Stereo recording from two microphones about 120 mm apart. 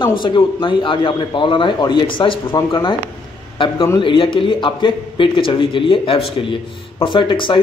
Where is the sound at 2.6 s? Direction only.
30° left (ahead or behind).